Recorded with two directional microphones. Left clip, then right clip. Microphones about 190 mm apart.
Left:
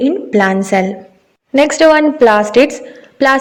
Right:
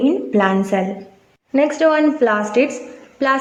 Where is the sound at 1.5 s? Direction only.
35° left (ahead or behind).